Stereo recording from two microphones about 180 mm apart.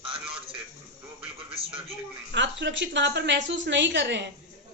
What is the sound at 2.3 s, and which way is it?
A woman's voice, 75° right (ahead or behind).